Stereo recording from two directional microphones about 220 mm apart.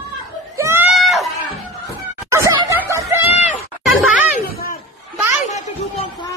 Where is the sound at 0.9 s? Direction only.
Centre (ahead or behind).